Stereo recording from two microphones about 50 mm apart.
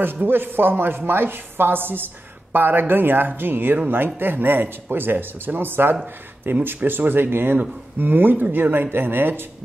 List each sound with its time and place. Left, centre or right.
0.0 s speech: right